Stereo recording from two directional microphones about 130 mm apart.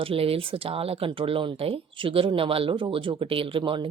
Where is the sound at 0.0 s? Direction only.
45° right (ahead or behind).